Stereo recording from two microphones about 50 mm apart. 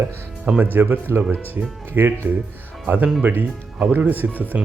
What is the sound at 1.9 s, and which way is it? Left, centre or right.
Speech, right.